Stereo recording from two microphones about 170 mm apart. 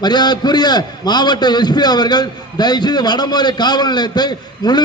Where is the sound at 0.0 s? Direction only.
25° left (ahead or behind).